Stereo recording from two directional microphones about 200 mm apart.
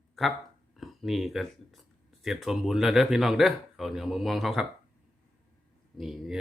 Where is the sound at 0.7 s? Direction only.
Centre (ahead or behind).